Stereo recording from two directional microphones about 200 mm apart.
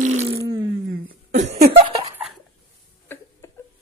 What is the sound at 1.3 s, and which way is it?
Cough, 35° right (ahead or behind).